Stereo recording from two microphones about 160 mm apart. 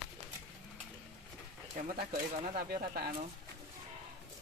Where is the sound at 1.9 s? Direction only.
65° right (ahead or behind).